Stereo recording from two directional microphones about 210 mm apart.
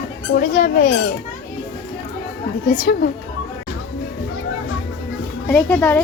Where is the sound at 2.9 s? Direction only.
45° left (ahead or behind).